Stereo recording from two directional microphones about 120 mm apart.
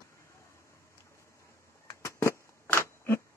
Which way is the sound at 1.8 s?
25° left (ahead or behind).